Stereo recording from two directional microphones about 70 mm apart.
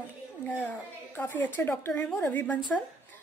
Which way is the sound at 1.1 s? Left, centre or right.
Left.